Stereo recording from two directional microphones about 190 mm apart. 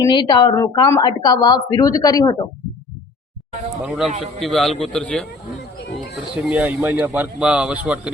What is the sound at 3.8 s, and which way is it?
Speech, centre (ahead or behind).